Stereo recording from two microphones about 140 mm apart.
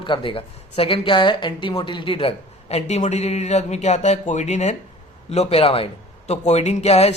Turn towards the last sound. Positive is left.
turn(degrees=50)  # may be behind; listen again after turning